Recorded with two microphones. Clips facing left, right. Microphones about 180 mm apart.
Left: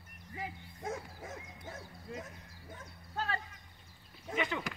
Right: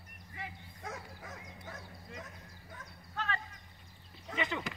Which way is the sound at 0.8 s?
25° left (ahead or behind).